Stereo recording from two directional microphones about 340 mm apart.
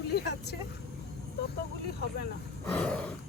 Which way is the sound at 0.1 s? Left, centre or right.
Left.